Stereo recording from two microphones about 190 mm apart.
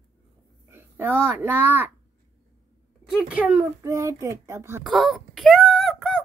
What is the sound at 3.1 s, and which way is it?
Speech, 5° right (ahead or behind).